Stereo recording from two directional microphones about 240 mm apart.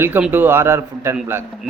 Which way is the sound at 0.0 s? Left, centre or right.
Centre.